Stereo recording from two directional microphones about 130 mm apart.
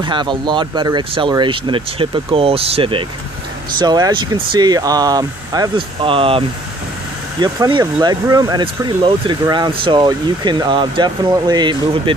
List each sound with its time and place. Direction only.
0.0 s speech: 35° right (ahead or behind)
3.7 s speech: 30° right (ahead or behind)
6.0 s speech: 45° right (ahead or behind)
7.3 s speech: 35° right (ahead or behind)